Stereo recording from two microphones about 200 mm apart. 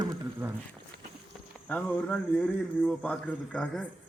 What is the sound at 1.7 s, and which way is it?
Speech, 5° left (ahead or behind).